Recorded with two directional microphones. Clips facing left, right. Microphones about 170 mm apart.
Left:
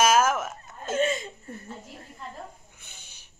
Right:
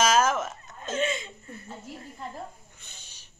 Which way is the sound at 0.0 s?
5° left (ahead or behind).